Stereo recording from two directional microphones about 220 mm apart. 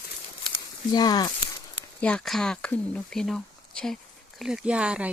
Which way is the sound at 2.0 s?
5° left (ahead or behind).